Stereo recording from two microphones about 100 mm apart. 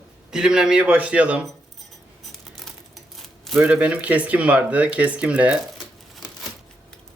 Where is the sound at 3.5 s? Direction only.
15° right (ahead or behind).